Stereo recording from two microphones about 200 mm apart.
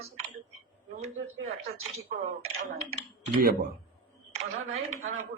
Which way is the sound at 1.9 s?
30° right (ahead or behind).